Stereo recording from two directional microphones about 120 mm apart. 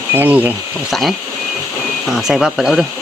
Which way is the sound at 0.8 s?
Centre (ahead or behind).